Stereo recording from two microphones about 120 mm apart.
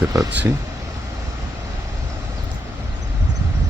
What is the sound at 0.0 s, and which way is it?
Speech, 30° right (ahead or behind).